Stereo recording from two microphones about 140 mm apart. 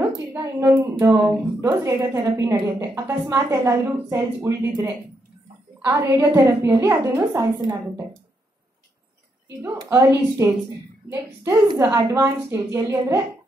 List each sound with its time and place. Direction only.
0.4 s a woman's voice: 20° right (ahead or behind)
9.8 s a woman's voice: 20° right (ahead or behind)